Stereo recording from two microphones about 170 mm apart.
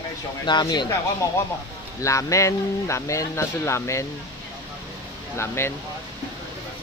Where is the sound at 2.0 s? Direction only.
20° left (ahead or behind).